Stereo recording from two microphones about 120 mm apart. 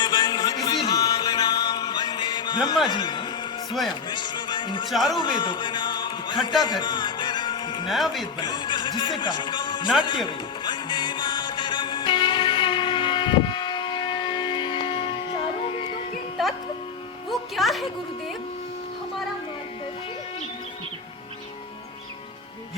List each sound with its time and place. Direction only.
0.0 s music: 35° left (ahead or behind)
2.8 s a man's voice: 40° left (ahead or behind)
4.9 s speech: centre (ahead or behind)
5.1 s a man's voice: 40° left (ahead or behind)
6.6 s music: 40° left (ahead or behind)
7.9 s speech: centre (ahead or behind)
8.4 s speech: 40° left (ahead or behind)
10.0 s music: 40° left (ahead or behind)
17.2 s music: centre (ahead or behind)